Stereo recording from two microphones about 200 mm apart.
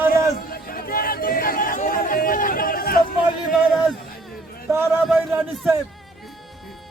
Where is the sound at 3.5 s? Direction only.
Centre (ahead or behind).